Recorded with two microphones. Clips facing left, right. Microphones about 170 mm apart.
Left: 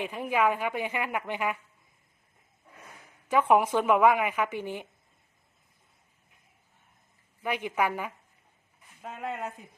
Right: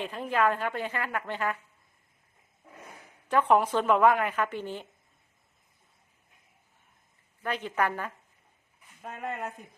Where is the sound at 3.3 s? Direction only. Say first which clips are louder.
Left 1 dB; 10° left (ahead or behind).